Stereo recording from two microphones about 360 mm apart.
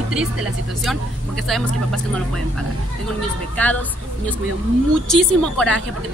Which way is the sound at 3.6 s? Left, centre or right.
Centre.